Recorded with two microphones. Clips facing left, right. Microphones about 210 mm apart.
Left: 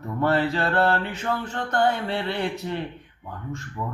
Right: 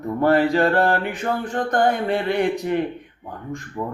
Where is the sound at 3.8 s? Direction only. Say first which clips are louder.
Right 5 dB; 30° right (ahead or behind).